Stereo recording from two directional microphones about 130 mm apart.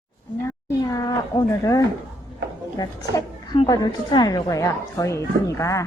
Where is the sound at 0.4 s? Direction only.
25° left (ahead or behind).